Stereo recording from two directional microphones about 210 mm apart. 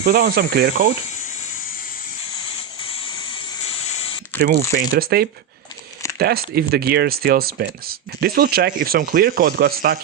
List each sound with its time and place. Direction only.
0.0 s speech: 45° right (ahead or behind)
3.7 s spray: 30° left (ahead or behind)
4.4 s speech: 45° right (ahead or behind)